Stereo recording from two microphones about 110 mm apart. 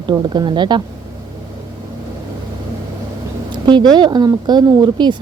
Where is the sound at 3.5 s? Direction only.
45° right (ahead or behind).